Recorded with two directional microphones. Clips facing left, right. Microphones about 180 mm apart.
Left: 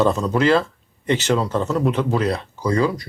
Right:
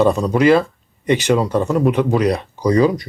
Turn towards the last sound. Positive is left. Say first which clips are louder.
# right 5 dB
turn(degrees=-20)  # may be behind; listen again after turning